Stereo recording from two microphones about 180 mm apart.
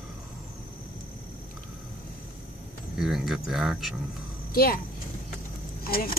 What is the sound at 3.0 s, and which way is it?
Speech, centre (ahead or behind).